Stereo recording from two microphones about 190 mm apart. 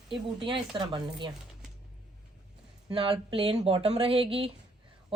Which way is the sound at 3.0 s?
30° right (ahead or behind).